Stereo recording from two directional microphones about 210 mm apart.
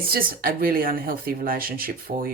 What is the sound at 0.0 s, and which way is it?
Speech, 45° right (ahead or behind).